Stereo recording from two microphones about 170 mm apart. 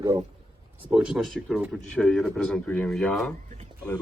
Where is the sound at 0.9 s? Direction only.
5° right (ahead or behind).